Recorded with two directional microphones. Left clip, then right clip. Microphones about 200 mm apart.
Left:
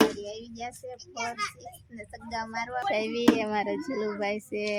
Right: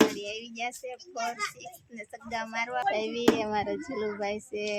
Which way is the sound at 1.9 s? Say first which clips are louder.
Even; centre (ahead or behind).